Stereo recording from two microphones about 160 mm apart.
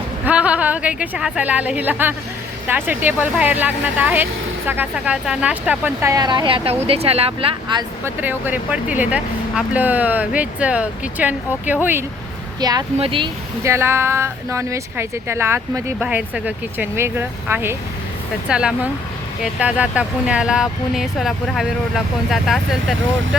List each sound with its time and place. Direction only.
0.3 s speech: 10° right (ahead or behind); by 7.9 s 30° right (ahead or behind)
8.0 s speech: 10° right (ahead or behind)
12.5 s speech: 25° right (ahead or behind)
13.7 s speech: 15° right (ahead or behind)